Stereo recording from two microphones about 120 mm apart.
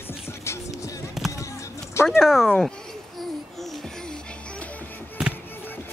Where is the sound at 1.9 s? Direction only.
20° left (ahead or behind).